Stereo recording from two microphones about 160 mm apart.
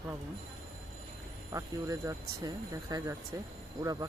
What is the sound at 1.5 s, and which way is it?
Speech, 20° right (ahead or behind).